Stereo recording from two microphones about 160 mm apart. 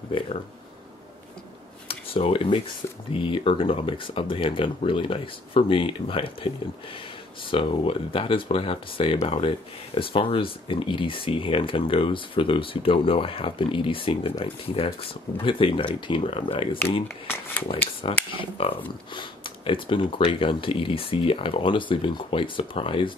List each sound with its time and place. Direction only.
1.9 s speech: 35° left (ahead or behind)
7.5 s speech: 35° left (ahead or behind)
18.0 s speech: 35° left (ahead or behind)